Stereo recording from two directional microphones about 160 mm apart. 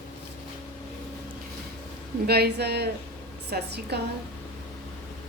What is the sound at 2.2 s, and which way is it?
A woman's voice, 85° right.